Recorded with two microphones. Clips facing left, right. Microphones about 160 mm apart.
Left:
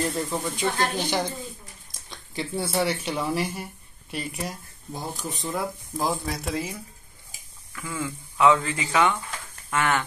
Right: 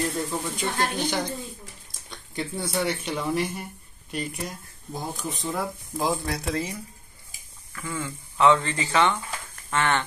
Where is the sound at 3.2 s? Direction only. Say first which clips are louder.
Even; centre (ahead or behind).